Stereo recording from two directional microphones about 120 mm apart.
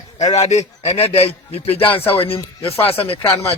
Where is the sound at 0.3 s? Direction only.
70° left (ahead or behind).